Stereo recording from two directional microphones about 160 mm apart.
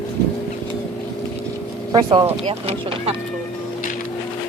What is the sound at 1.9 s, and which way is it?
Speech, 30° right (ahead or behind).